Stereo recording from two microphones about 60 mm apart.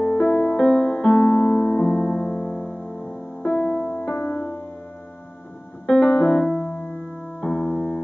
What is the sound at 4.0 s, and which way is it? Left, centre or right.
Music, left.